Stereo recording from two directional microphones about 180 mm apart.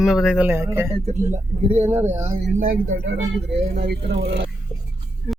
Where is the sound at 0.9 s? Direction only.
40° right (ahead or behind).